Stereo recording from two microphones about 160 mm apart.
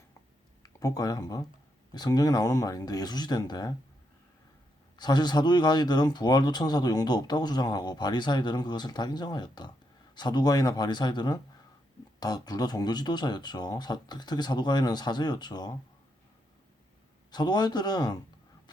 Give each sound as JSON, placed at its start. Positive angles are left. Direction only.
{"t": 0.6, "sound": "speech", "side_deg": 20}
{"t": 4.9, "sound": "speech", "side_deg": 25}
{"t": 17.3, "sound": "speech", "side_deg": 25}